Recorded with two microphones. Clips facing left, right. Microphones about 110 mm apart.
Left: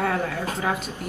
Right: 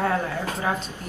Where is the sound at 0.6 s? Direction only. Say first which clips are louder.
Even; 15° left (ahead or behind).